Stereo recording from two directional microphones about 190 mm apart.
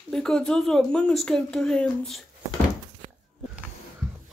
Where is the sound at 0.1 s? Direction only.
5° left (ahead or behind).